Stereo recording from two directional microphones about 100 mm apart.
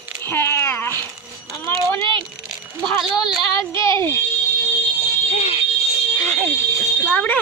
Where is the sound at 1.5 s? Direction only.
30° left (ahead or behind).